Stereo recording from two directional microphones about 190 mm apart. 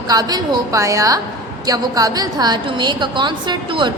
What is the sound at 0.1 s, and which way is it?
A woman's voice, 20° right (ahead or behind).